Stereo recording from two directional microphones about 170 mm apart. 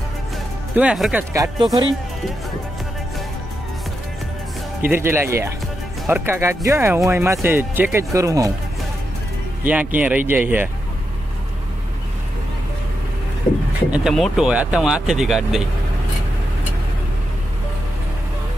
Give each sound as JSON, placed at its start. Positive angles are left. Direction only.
{"t": 0.7, "sound": "speech", "side_deg": -5}
{"t": 1.3, "sound": "speech", "side_deg": -20}
{"t": 4.8, "sound": "speech", "side_deg": -15}
{"t": 9.7, "sound": "speech", "side_deg": -10}
{"t": 13.8, "sound": "speech", "side_deg": -5}